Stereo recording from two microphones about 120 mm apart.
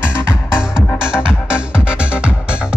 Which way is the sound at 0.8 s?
5° right (ahead or behind).